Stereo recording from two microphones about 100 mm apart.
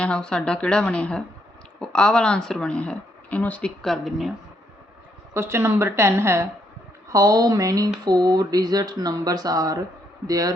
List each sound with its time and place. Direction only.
0.0 s speech: 10° left (ahead or behind)
3.8 s speech: centre (ahead or behind)
5.3 s a woman's voice: 25° right (ahead or behind)
7.1 s speech: 40° right (ahead or behind)